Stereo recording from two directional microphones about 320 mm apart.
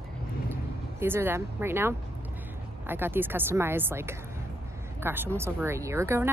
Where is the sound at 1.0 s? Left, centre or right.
Centre.